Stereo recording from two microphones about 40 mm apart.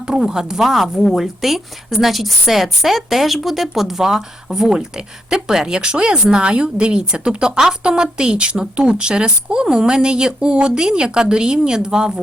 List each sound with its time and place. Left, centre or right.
0.0 s a woman's voice: centre